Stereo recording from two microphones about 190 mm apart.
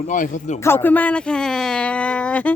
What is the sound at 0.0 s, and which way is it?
Speech, 45° left (ahead or behind).